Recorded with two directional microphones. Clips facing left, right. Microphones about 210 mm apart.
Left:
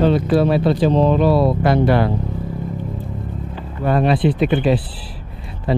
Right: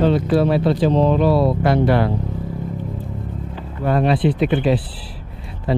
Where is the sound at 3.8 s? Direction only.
20° left (ahead or behind).